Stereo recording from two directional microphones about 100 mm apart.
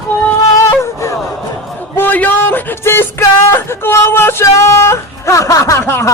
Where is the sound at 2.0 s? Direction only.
20° left (ahead or behind).